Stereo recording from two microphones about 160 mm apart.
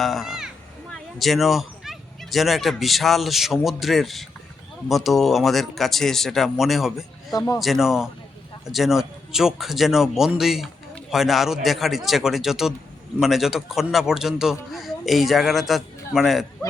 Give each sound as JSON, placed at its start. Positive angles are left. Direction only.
{"t": 0.0, "sound": "a man's voice", "side_deg": 0}
{"t": 7.3, "sound": "a man's voice", "side_deg": 25}
{"t": 7.6, "sound": "a man's voice", "side_deg": 0}